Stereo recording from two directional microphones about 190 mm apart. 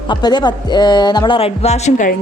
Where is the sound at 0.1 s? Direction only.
20° left (ahead or behind).